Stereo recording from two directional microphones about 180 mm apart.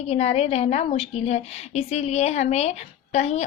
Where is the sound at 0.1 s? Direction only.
35° left (ahead or behind).